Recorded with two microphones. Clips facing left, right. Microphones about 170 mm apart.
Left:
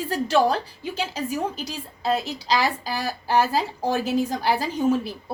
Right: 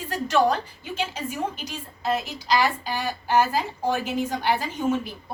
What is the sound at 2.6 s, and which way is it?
A woman's voice, 35° left (ahead or behind).